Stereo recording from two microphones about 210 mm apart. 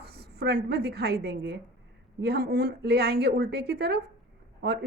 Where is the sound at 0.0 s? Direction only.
50° right (ahead or behind).